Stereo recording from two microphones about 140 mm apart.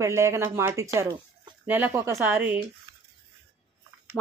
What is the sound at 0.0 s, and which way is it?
Speech, 20° right (ahead or behind).